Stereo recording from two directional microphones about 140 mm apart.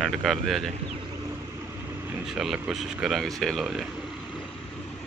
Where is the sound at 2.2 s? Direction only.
5° right (ahead or behind).